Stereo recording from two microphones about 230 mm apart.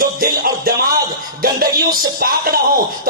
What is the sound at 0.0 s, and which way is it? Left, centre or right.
Music, right.